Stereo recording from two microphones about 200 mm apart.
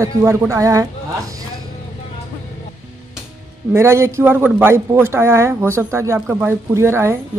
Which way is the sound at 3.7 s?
15° right (ahead or behind).